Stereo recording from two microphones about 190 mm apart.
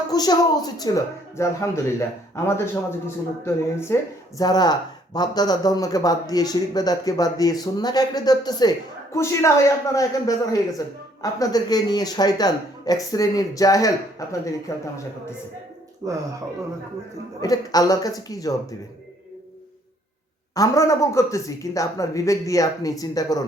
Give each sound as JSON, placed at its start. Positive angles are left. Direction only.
{"t": 0.1, "sound": "a man's voice", "side_deg": 20}
{"t": 16.0, "sound": "speech", "side_deg": -20}
{"t": 17.4, "sound": "a man's voice", "side_deg": 20}
{"t": 20.6, "sound": "speech", "side_deg": 15}